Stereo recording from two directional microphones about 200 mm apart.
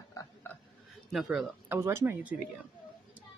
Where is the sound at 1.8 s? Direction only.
15° right (ahead or behind).